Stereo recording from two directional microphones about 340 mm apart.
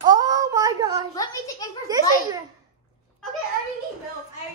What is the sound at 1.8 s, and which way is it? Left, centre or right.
Speech, centre.